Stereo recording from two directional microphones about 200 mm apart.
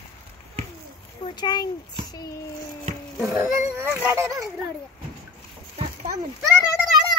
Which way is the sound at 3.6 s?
15° right (ahead or behind).